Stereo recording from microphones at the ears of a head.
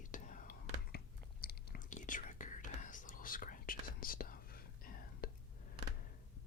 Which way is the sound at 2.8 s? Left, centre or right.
Left.